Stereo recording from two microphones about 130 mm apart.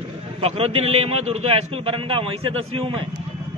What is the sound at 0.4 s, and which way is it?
A man's voice, 50° right (ahead or behind).